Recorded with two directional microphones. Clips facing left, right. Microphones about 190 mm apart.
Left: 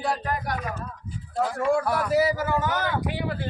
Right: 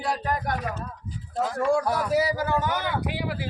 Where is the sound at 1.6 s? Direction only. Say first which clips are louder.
Even; 5° left (ahead or behind).